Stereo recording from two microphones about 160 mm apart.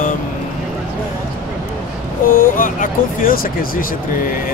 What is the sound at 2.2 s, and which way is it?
Speech, 60° left (ahead or behind).